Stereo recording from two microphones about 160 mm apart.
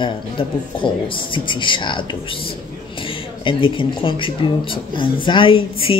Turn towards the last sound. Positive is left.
turn(degrees=35)  # may be behind; listen again after turning